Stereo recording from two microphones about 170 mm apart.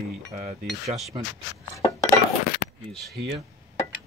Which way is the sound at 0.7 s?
Centre (ahead or behind).